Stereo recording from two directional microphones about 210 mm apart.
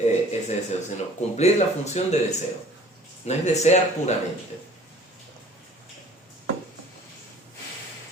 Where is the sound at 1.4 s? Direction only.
30° left (ahead or behind).